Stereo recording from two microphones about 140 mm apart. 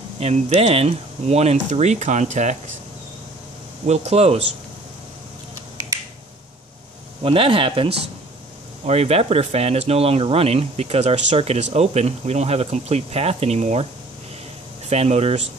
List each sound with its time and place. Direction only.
0.2 s speech: 50° right (ahead or behind)
3.8 s speech: 50° right (ahead or behind)
7.2 s speech: 40° right (ahead or behind)
14.9 s speech: 50° right (ahead or behind)